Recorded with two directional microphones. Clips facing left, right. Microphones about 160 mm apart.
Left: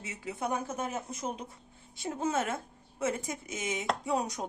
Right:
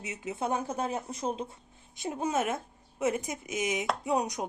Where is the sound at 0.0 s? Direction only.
20° right (ahead or behind).